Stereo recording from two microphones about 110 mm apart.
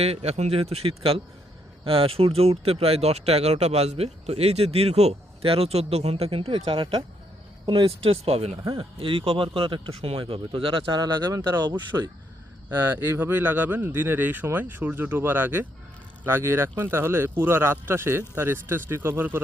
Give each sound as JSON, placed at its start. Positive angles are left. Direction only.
{"t": 0.0, "sound": "speech", "side_deg": -70}
{"t": 8.6, "sound": "speech", "side_deg": -50}
{"t": 11.9, "sound": "speech", "side_deg": -25}